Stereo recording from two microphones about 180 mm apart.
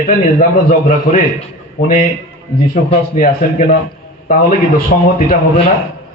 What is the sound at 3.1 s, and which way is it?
A man's voice, 45° left (ahead or behind).